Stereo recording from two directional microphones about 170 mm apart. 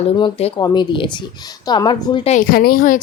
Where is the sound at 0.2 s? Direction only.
35° left (ahead or behind).